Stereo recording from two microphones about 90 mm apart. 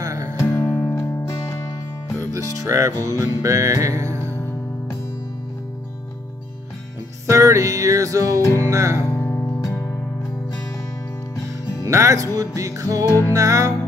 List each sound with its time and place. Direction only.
0.0 s music: 40° right (ahead or behind)
0.4 s music: 35° left (ahead or behind)
2.1 s speech: 35° right (ahead or behind)
3.4 s music: 35° right (ahead or behind)
7.2 s music: 35° right (ahead or behind)
8.4 s music: 30° left (ahead or behind)
8.6 s music: 35° right (ahead or behind)
9.2 s music: 25° left (ahead or behind)
11.8 s music: 35° right (ahead or behind)
13.0 s music: 30° left (ahead or behind)
13.3 s music: 35° right (ahead or behind)